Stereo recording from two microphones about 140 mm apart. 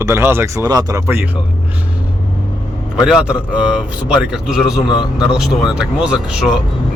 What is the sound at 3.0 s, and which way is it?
A man's voice, 5° right (ahead or behind).